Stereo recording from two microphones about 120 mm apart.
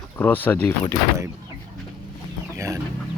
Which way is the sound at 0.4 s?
15° left (ahead or behind).